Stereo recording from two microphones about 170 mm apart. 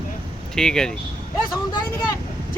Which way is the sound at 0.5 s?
5° left (ahead or behind).